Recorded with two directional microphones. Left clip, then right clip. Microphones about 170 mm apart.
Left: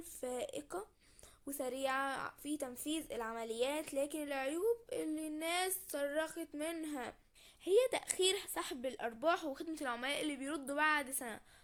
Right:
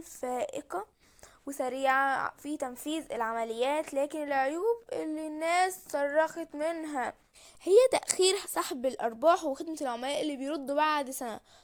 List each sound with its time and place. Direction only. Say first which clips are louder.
0.0 s a woman's voice: right 8 dB; 25° right (ahead or behind)
7.6 s a woman's voice: right 10 dB; 45° right (ahead or behind)